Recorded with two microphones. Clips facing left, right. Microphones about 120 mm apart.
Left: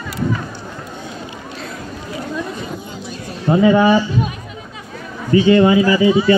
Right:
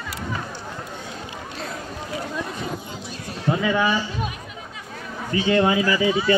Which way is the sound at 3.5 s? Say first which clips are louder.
Left 9 dB; 35° left (ahead or behind).